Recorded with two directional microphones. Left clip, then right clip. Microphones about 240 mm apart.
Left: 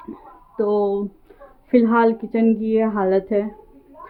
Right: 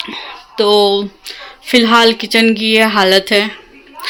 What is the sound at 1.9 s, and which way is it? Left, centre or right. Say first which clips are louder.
Speech: right 8 dB; centre.